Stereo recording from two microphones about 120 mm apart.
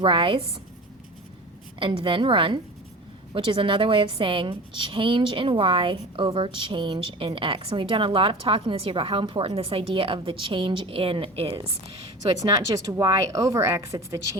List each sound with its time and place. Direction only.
0.0 s a woman's voice: 45° right (ahead or behind)
1.8 s a woman's voice: 45° right (ahead or behind)
12.4 s speech: 30° right (ahead or behind)